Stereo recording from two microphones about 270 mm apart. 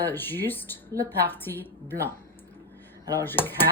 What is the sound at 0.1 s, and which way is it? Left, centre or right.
A woman's voice, centre.